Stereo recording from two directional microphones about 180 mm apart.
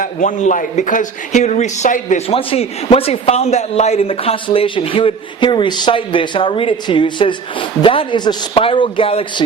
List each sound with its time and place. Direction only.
0.0 s speech: 45° left (ahead or behind)